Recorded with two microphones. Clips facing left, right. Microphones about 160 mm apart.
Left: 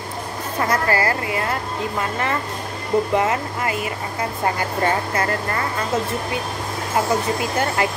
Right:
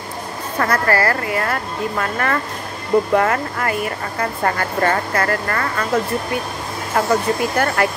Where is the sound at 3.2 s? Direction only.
55° right (ahead or behind).